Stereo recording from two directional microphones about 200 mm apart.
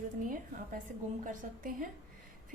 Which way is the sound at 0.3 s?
40° right (ahead or behind).